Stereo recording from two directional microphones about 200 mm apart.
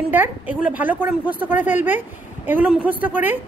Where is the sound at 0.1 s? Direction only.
10° right (ahead or behind).